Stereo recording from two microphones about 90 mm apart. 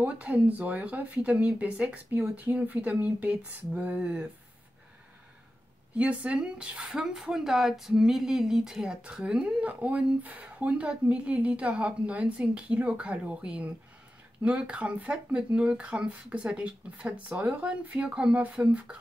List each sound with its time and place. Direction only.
0.0 s speech: 15° right (ahead or behind)
5.9 s speech: 15° right (ahead or behind)